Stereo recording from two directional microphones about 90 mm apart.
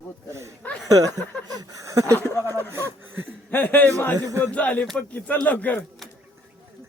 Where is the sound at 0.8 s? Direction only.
45° right (ahead or behind).